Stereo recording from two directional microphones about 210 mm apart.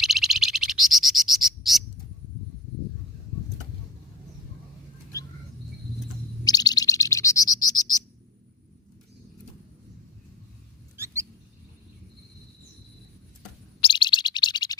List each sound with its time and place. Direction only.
0.0 s bird: centre (ahead or behind)
6.4 s bird: 20° left (ahead or behind)
10.9 s rodents: 15° right (ahead or behind)
13.8 s bird: 20° left (ahead or behind)